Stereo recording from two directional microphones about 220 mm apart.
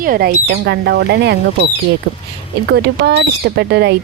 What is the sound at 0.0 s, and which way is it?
A woman's voice, 40° right (ahead or behind).